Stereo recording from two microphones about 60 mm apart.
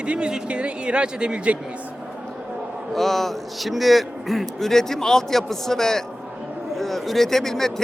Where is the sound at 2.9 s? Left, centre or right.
Centre.